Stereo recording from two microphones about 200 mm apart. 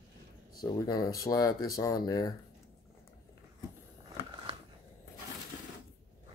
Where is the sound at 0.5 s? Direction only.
20° left (ahead or behind).